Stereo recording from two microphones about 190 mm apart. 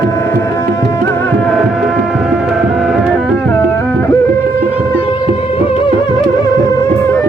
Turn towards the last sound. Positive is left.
turn(degrees=30)  # may be behind; listen again after turning